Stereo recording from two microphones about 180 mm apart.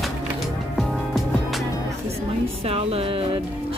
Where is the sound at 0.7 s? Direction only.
Centre (ahead or behind).